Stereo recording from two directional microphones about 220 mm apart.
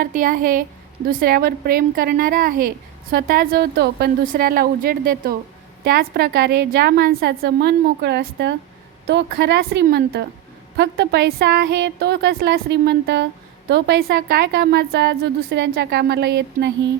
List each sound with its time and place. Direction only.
0.0 s a woman's voice: 40° right (ahead or behind)